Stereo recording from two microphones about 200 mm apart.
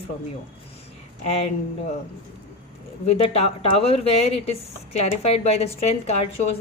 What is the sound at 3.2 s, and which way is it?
A woman's voice, 30° left (ahead or behind).